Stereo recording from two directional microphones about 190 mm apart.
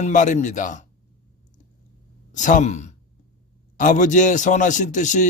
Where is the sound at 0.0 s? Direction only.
40° left (ahead or behind).